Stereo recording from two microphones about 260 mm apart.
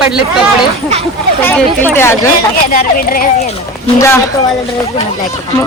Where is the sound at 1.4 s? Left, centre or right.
Centre.